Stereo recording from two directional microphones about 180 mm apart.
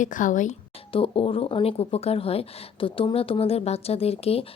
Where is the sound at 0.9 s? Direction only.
30° left (ahead or behind).